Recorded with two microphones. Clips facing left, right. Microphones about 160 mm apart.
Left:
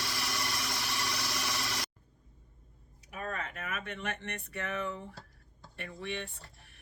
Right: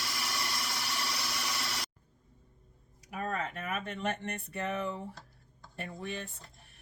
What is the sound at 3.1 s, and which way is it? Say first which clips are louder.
Speech: right 3 dB; 40° right (ahead or behind).